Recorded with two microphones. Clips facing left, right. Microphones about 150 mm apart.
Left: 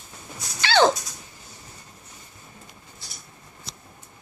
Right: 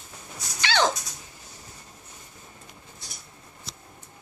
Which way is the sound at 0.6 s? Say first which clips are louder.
Left 5 dB; 35° left (ahead or behind).